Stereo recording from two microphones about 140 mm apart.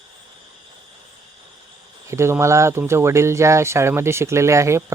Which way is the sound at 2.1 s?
20° right (ahead or behind).